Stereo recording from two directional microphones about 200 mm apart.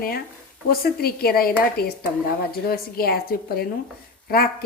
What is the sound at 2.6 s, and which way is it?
Speech, 50° left (ahead or behind).